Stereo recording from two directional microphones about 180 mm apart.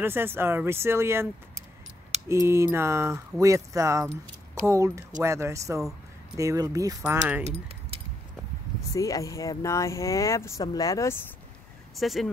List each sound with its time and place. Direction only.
0.0 s speech: 10° right (ahead or behind)
7.0 s speech: 10° right (ahead or behind)
7.4 s speech: 35° right (ahead or behind)
8.9 s speech: 20° left (ahead or behind)
12.0 s speech: centre (ahead or behind)